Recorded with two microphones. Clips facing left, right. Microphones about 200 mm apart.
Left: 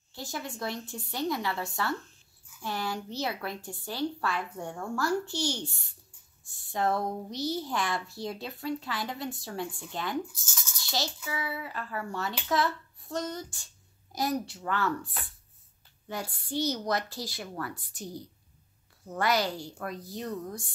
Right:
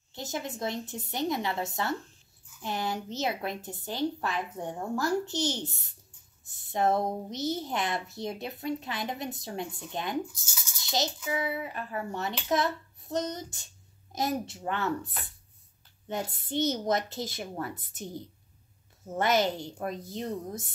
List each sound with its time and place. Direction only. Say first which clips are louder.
0.1 s a child's voice: right 2 dB; 20° right (ahead or behind)
10.8 s a sound: right 3 dB; 20° right (ahead or behind)
11.2 s a child's voice: right 4 dB; 20° right (ahead or behind)